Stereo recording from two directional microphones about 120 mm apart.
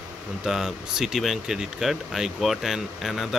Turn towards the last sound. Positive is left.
turn(degrees=0)  # may be behind; listen again after turning